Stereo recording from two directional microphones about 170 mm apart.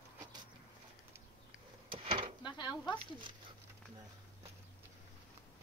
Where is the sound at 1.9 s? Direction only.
30° right (ahead or behind).